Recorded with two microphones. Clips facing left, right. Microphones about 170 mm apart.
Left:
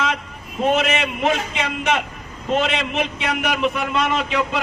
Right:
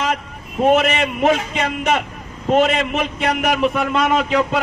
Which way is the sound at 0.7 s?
40° right (ahead or behind).